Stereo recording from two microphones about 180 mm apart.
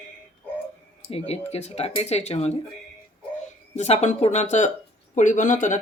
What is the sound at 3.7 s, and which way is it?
Speech, 35° left (ahead or behind).